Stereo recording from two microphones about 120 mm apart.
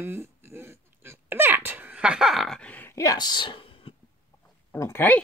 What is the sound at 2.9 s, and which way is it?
A woman's voice, 30° left (ahead or behind).